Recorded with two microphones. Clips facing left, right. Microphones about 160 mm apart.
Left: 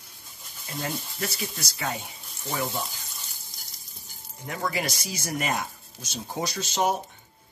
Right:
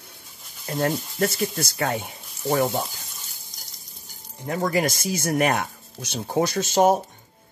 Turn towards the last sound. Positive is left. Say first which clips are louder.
# right 7 dB
turn(degrees=-45)  # may be behind; listen again after turning